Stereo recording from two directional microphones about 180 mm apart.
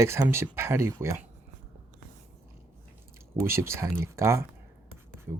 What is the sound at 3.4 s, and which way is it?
Speech, 15° right (ahead or behind).